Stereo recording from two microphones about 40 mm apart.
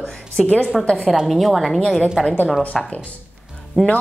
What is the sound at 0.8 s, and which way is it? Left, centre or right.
Speech, left.